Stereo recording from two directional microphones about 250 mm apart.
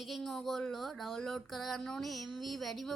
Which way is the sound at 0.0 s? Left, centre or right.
Centre.